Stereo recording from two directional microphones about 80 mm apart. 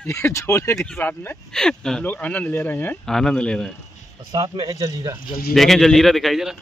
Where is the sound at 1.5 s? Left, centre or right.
Centre.